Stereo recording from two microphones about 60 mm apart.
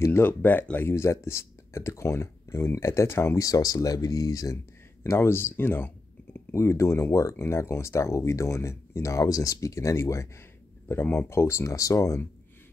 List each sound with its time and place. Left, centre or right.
0.2 s speech: left
0.7 s speech: left
3.3 s speech: left
5.0 s speech: left
6.5 s speech: left
9.3 s speech: left
10.9 s speech: left